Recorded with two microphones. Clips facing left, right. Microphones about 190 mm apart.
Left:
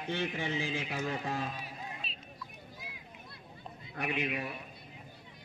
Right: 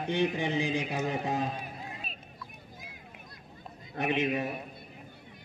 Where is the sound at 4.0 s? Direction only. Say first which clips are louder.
Right 6 dB; 20° right (ahead or behind).